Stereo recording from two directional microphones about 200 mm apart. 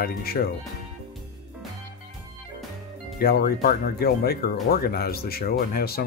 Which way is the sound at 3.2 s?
50° left (ahead or behind).